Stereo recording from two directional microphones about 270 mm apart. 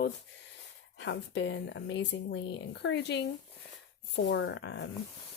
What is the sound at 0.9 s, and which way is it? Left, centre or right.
Speech, left.